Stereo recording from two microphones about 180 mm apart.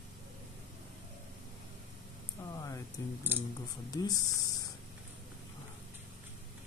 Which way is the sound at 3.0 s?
20° left (ahead or behind).